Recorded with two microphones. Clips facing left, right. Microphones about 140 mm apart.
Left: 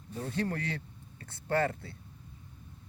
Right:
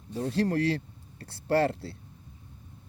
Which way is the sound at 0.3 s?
70° right (ahead or behind).